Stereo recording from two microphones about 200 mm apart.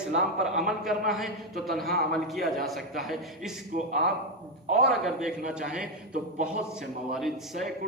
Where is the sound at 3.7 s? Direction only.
45° right (ahead or behind).